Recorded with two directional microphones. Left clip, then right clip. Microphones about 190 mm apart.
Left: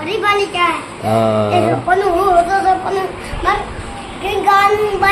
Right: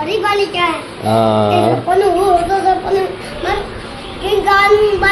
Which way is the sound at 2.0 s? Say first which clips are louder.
Right 1 dB; 20° left (ahead or behind).